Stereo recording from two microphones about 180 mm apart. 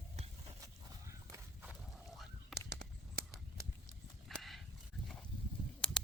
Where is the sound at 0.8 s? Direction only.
15° right (ahead or behind).